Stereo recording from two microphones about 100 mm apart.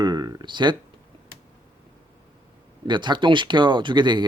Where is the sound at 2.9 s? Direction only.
50° right (ahead or behind).